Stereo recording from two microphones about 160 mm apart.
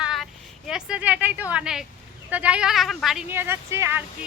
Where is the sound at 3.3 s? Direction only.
15° right (ahead or behind).